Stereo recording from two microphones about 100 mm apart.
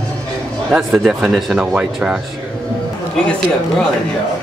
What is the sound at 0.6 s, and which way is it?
Speech, 5° right (ahead or behind).